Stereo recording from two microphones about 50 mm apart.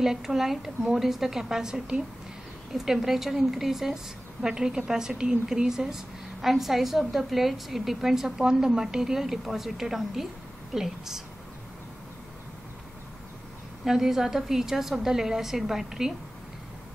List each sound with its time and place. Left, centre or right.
0.0 s a woman's voice: centre
13.8 s a woman's voice: centre